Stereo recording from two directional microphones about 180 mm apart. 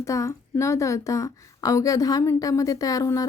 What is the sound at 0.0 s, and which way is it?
A woman's voice, 15° left (ahead or behind).